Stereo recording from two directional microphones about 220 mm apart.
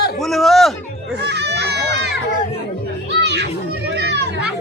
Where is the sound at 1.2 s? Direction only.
50° right (ahead or behind).